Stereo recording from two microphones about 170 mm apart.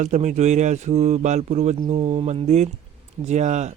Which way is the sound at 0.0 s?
45° right (ahead or behind).